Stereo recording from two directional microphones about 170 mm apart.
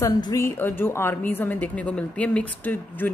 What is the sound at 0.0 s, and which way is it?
A woman's voice, 20° left (ahead or behind).